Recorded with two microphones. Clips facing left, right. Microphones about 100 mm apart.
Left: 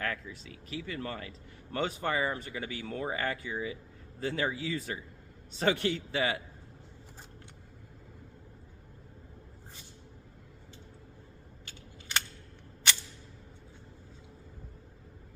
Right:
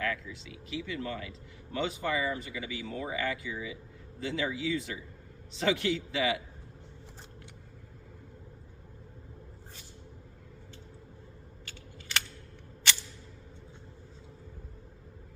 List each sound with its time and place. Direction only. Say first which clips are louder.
0.0 s speech: right 2 dB; 45° left (ahead or behind)